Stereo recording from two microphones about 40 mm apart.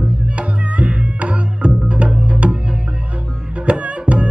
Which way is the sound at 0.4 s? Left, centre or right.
Right.